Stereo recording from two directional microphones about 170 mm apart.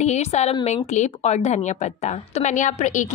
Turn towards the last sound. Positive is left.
turn(degrees=45)  # may be behind; listen again after turning